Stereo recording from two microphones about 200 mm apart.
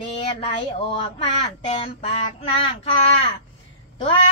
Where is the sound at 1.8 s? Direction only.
30° left (ahead or behind).